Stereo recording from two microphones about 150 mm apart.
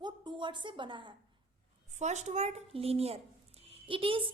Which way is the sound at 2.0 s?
50° right (ahead or behind).